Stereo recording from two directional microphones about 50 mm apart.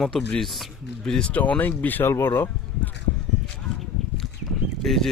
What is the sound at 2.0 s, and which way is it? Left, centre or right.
Speech, left.